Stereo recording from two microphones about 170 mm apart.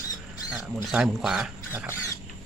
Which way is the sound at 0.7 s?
Centre (ahead or behind).